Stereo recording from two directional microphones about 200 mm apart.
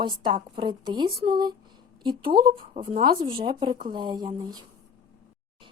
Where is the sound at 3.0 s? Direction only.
25° right (ahead or behind).